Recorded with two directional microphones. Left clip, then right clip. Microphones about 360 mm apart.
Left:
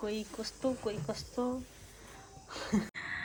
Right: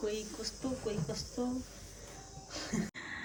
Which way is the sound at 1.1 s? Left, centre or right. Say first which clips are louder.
Left 2 dB; centre.